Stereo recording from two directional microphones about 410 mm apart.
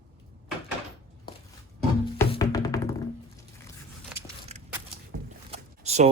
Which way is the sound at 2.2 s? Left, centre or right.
Centre.